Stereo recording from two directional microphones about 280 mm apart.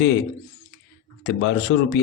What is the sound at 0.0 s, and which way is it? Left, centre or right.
A man's voice, left.